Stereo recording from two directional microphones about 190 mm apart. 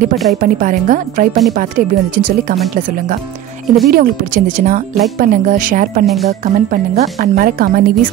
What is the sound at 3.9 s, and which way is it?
Speech, 45° right (ahead or behind).